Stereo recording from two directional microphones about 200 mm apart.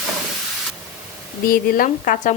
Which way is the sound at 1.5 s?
45° left (ahead or behind).